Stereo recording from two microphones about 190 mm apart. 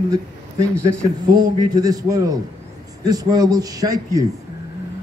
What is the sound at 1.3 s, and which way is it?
A man's voice, 20° right (ahead or behind).